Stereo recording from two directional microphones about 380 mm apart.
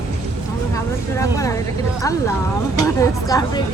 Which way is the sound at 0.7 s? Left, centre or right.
Centre.